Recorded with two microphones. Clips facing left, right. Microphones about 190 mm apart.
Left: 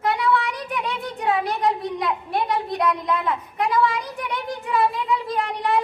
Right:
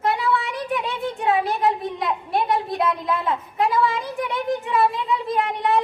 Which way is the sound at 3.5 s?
25° right (ahead or behind).